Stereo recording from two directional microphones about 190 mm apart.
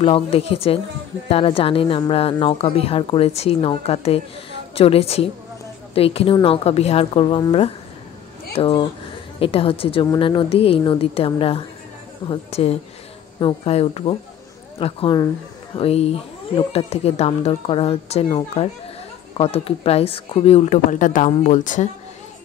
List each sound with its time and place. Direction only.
0.0 s a woman's voice: 30° left (ahead or behind)